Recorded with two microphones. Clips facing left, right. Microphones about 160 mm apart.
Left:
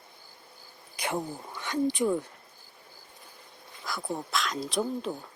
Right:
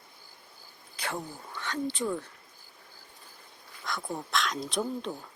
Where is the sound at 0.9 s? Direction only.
15° left (ahead or behind).